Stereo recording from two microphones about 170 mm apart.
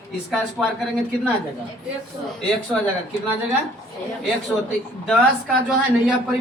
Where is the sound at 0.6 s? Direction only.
Centre (ahead or behind).